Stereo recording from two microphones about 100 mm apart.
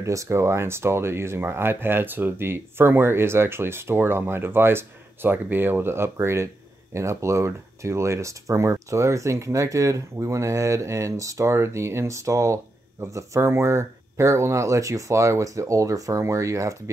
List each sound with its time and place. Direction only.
0.0 s speech: 30° right (ahead or behind)